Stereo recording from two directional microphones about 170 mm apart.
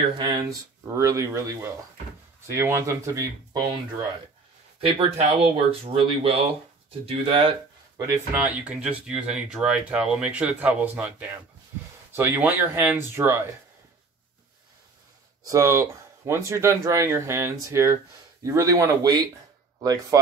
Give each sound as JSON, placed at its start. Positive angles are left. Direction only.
{"t": 0.2, "sound": "speech", "side_deg": -25}
{"t": 4.7, "sound": "speech", "side_deg": -35}
{"t": 8.4, "sound": "speech", "side_deg": -5}
{"t": 15.4, "sound": "speech", "side_deg": -20}